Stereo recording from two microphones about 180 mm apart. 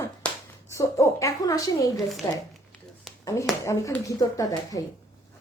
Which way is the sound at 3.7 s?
15° left (ahead or behind).